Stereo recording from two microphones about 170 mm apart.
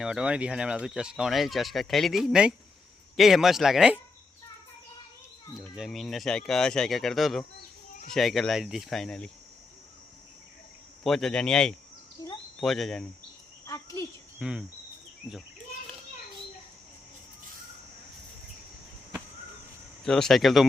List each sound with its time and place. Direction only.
0.0 s speech: 5° right (ahead or behind)
5.5 s speech: 5° right (ahead or behind)
11.0 s speech: centre (ahead or behind)
12.2 s a sound: 20° left (ahead or behind)
12.5 s speech: centre (ahead or behind)
13.7 s speech: 20° left (ahead or behind)
14.3 s speech: 5° right (ahead or behind)
20.1 s speech: 5° left (ahead or behind)